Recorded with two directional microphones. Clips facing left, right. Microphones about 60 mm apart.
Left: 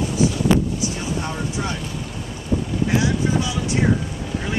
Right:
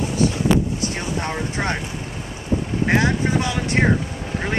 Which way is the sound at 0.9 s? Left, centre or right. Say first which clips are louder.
Right 1 dB; right.